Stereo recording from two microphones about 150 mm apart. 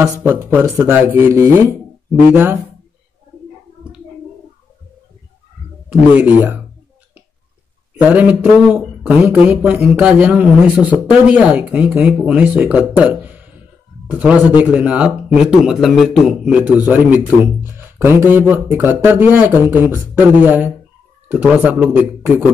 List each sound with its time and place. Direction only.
0.0 s speech: 15° right (ahead or behind)
5.9 s speech: 10° right (ahead or behind)
7.9 s a man's voice: 10° right (ahead or behind)